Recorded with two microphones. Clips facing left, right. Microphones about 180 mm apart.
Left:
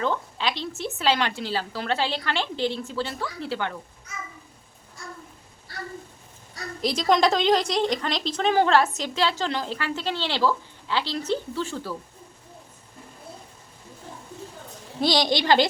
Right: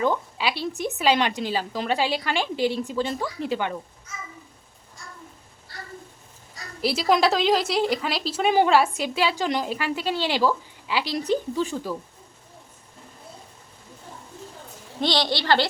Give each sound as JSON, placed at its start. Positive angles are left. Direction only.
{"t": 0.0, "sound": "a woman's voice", "side_deg": -10}
{"t": 6.8, "sound": "a woman's voice", "side_deg": -5}
{"t": 15.0, "sound": "a woman's voice", "side_deg": 10}